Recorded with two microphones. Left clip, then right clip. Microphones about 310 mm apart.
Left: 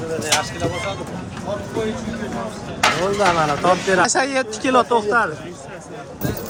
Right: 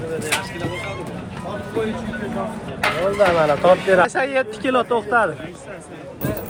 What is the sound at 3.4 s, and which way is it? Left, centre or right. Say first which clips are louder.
Speech: right 2 dB; centre.